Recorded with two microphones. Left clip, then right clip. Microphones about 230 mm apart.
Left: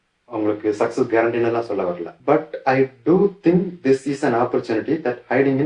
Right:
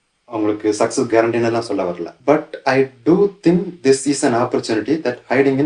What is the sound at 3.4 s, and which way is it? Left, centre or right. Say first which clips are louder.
Speech: right 3 dB; right.